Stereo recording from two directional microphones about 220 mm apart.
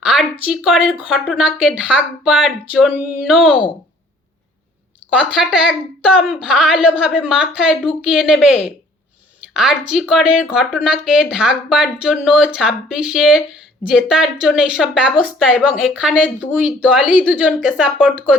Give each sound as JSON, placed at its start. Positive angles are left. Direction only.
{"t": 0.0, "sound": "a sound", "side_deg": -5}
{"t": 0.5, "sound": "speech", "side_deg": 0}
{"t": 5.2, "sound": "speech", "side_deg": -5}